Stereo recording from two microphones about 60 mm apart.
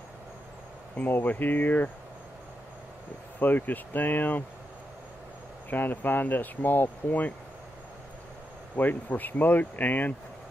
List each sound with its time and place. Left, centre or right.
0.9 s speech: left
3.3 s speech: left
5.7 s speech: left
8.7 s speech: left